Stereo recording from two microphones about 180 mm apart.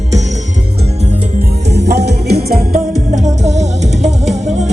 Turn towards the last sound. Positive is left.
turn(degrees=-40)  # may be behind; listen again after turning